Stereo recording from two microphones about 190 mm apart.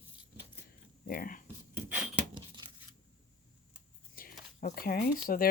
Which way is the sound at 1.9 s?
5° right (ahead or behind).